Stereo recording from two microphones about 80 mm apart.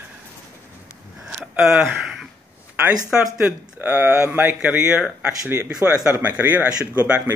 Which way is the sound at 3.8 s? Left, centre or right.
Right.